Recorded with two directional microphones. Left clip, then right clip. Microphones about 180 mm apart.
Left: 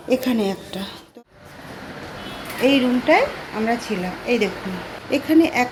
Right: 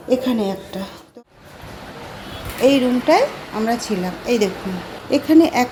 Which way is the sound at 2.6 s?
15° right (ahead or behind).